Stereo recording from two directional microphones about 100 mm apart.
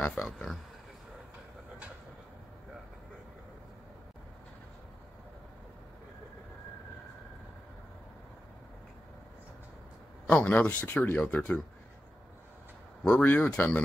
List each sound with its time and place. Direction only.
0.0 s speech: 10° left (ahead or behind)
10.2 s speech: 15° left (ahead or behind)
13.0 s speech: 15° left (ahead or behind)